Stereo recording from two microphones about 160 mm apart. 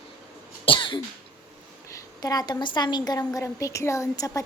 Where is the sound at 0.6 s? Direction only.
30° left (ahead or behind).